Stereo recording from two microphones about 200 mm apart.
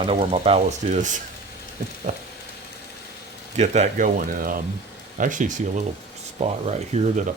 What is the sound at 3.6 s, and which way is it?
Speech, 40° right (ahead or behind).